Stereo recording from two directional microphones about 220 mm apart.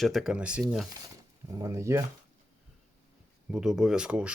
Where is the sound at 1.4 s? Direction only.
15° right (ahead or behind).